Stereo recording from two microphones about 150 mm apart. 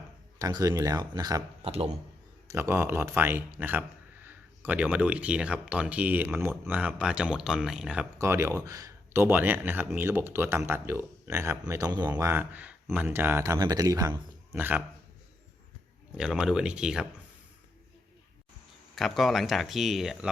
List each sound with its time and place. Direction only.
0.3 s speech: 25° right (ahead or behind)
1.6 s speech: 40° right (ahead or behind)
2.5 s speech: 15° right (ahead or behind)
8.2 s speech: 15° right (ahead or behind)
14.5 s speech: 10° right (ahead or behind)
16.1 s speech: 5° right (ahead or behind)
18.9 s speech: centre (ahead or behind)